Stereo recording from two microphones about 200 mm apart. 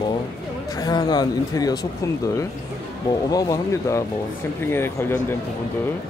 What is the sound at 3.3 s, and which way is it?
A man's voice, 20° left (ahead or behind).